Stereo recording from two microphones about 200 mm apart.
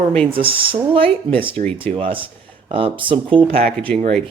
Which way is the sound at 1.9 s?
25° right (ahead or behind).